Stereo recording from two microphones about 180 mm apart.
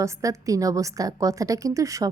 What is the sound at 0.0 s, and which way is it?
A woman's voice, 20° right (ahead or behind).